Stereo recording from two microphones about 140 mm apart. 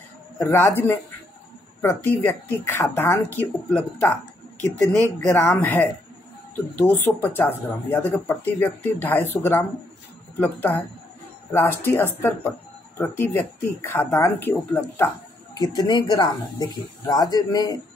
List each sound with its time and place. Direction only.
0.5 s speech: 15° left (ahead or behind)
15.5 s speech: 30° left (ahead or behind)